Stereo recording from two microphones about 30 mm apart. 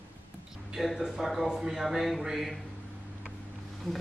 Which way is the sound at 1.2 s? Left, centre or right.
Centre.